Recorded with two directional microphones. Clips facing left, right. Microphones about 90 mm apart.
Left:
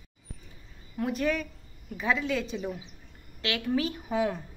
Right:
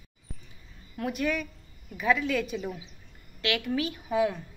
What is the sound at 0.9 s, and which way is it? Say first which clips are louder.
A woman's voice: left 1 dB; 30° left (ahead or behind).